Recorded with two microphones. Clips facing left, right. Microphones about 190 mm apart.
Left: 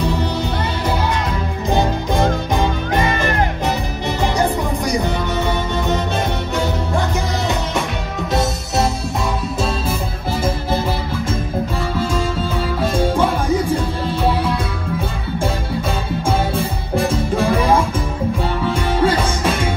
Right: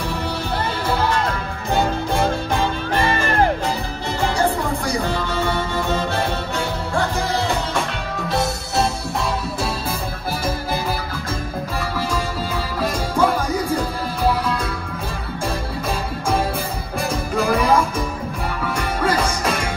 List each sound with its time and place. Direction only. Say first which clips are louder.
1.7 s music: left 2 dB; 20° left (ahead or behind)
12.8 s music: left 2 dB; 30° left (ahead or behind)
16.5 s music: left 5 dB; centre (ahead or behind)
17.3 s music: even; 30° left (ahead or behind)